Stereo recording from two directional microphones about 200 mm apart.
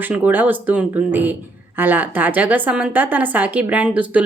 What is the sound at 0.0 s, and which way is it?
A woman's voice, 10° right (ahead or behind).